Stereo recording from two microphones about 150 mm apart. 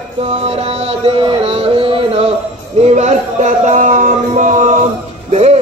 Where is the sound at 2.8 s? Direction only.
50° right (ahead or behind).